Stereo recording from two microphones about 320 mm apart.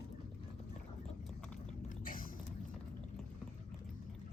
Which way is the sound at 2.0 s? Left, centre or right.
Left.